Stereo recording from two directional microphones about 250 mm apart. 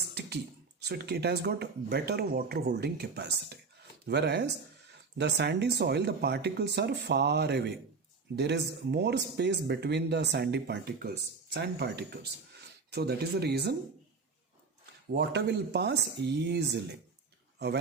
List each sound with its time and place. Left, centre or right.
0.1 s a sound: right
0.8 s speech: right
15.1 s speech: right